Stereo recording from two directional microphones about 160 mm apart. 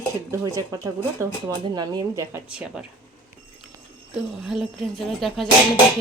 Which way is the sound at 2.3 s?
5° right (ahead or behind).